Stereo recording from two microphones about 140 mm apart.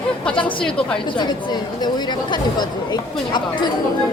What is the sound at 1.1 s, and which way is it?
Speech, 30° left (ahead or behind).